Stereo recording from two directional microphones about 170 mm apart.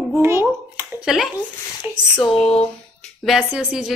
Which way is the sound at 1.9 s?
5° right (ahead or behind).